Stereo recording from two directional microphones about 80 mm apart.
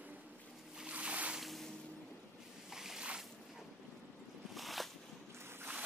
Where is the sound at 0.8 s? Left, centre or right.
Centre.